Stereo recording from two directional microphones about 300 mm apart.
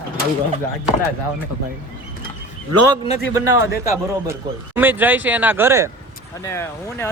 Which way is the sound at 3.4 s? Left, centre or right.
Left.